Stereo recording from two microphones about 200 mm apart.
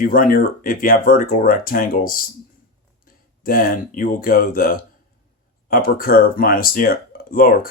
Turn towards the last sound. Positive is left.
turn(degrees=45)  # may be behind; listen again after turning